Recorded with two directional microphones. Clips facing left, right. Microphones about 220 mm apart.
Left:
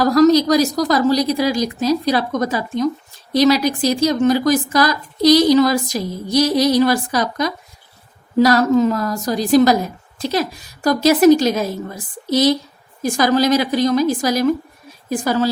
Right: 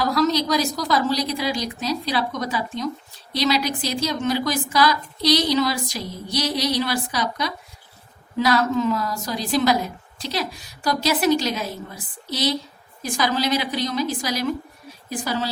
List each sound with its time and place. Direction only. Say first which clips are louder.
0.0 s a woman's voice: left 9 dB; 45° left (ahead or behind)